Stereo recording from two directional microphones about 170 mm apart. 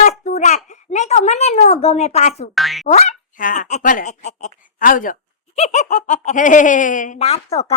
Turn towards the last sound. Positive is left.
turn(degrees=40)  # may be behind; listen again after turning